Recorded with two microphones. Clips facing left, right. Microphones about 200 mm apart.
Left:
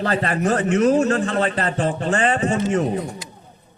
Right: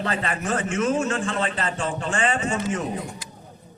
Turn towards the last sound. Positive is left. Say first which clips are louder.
# left 6 dB
turn(degrees=35)  # may be behind; listen again after turning